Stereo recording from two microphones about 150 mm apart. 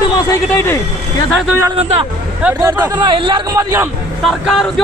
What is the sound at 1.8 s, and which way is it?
Speech, 45° right (ahead or behind).